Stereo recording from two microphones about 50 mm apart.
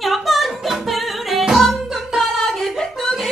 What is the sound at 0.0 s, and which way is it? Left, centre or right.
Singing, centre.